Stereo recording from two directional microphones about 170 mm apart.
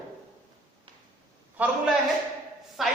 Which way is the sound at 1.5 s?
10° right (ahead or behind).